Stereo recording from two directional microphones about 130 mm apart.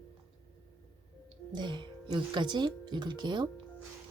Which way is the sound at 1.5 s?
35° right (ahead or behind).